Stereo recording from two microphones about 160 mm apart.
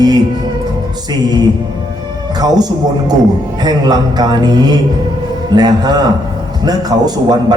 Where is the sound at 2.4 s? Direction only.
25° right (ahead or behind).